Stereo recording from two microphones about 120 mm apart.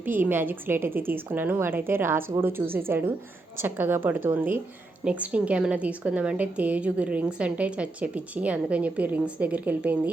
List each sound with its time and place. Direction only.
0.0 s a woman's voice: 15° right (ahead or behind)